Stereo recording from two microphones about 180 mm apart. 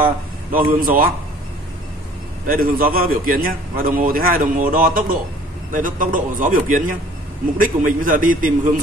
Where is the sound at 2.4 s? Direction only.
55° right (ahead or behind).